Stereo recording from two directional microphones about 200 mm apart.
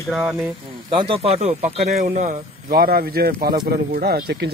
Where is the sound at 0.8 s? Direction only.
25° right (ahead or behind).